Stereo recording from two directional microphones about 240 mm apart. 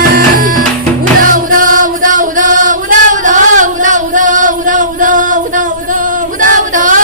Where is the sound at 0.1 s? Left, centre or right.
Right.